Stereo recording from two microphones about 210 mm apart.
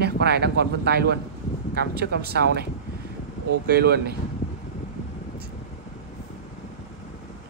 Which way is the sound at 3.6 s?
50° right (ahead or behind).